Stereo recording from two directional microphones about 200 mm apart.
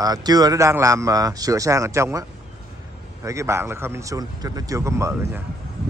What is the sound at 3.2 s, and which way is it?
Speech, 15° right (ahead or behind).